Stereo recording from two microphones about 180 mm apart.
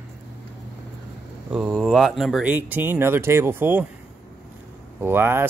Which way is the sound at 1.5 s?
5° right (ahead or behind).